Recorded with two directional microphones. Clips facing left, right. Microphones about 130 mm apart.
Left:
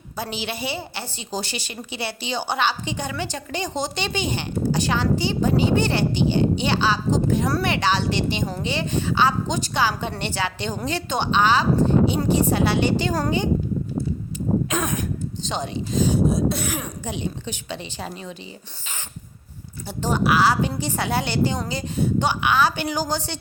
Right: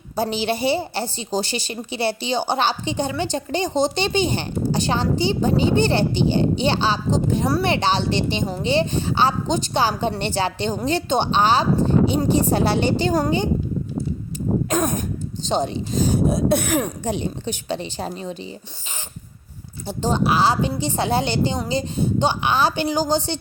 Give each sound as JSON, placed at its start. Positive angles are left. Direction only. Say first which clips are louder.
{"t": 0.2, "sound": "a woman's voice", "louder": "right 7 dB", "side_deg": -30}
{"t": 14.7, "sound": "a sound", "louder": "right 4 dB", "side_deg": -35}
{"t": 15.4, "sound": "speech", "louder": "right 7 dB", "side_deg": -35}
{"t": 17.0, "sound": "a woman's voice", "louder": "right 4 dB", "side_deg": -40}
{"t": 19.9, "sound": "a woman's voice", "louder": "right 1 dB", "side_deg": -25}